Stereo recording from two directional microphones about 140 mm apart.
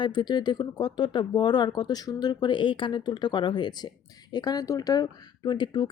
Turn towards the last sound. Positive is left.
turn(degrees=30)  # may be behind; listen again after turning